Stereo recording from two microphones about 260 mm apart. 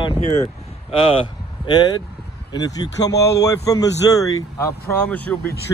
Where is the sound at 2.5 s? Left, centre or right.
Centre.